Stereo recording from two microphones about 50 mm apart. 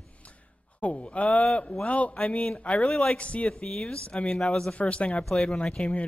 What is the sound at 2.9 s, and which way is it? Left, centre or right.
Speech, centre.